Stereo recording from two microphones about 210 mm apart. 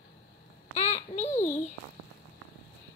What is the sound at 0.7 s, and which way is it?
Babbling, 30° left (ahead or behind).